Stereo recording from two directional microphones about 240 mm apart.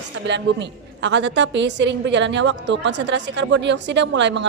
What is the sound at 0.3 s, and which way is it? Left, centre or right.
A woman's voice, right.